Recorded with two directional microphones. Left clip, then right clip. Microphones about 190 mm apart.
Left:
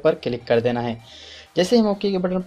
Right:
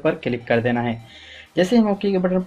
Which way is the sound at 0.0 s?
25° left (ahead or behind).